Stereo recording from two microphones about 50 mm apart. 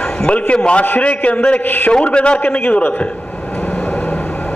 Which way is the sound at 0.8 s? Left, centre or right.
Left.